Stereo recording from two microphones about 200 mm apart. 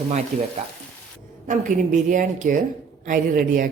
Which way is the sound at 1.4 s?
40° right (ahead or behind).